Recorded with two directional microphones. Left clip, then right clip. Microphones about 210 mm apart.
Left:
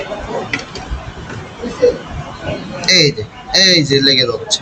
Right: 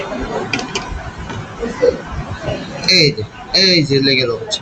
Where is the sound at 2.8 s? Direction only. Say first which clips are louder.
Left 1 dB; 50° left (ahead or behind).